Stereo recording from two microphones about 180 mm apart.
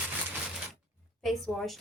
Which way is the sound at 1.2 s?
Centre (ahead or behind).